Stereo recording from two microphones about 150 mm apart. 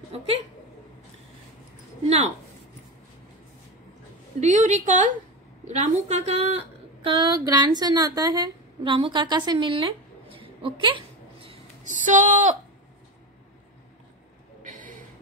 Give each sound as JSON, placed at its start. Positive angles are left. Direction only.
{"t": 2.0, "sound": "a woman's voice", "side_deg": -50}
{"t": 4.4, "sound": "a woman's voice", "side_deg": -55}
{"t": 7.1, "sound": "a woman's voice", "side_deg": -30}
{"t": 11.8, "sound": "speech", "side_deg": -55}
{"t": 14.6, "sound": "a sound", "side_deg": -60}